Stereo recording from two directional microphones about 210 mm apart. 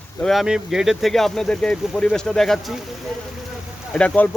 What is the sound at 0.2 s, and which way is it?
Speech, centre (ahead or behind).